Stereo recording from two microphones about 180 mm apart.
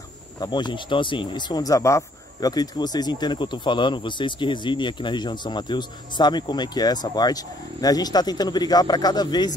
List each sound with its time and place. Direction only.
0.4 s speech: 25° left (ahead or behind)